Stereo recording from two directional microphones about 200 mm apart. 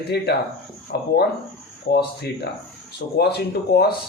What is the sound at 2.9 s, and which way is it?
Speech, 55° left (ahead or behind).